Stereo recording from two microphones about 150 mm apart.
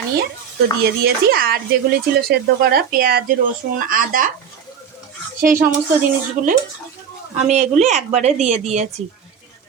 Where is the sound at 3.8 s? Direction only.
70° right (ahead or behind).